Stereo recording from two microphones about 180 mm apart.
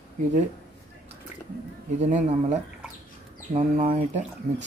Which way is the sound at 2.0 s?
40° right (ahead or behind).